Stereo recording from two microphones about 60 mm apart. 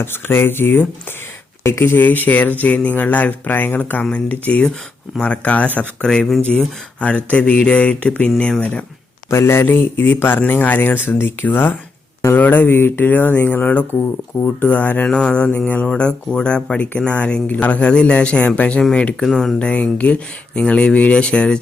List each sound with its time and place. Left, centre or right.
0.0 s speech: left
7.3 s speech: left
9.3 s speech: left
15.0 s speech: centre
19.2 s speech: centre
19.5 s speech: centre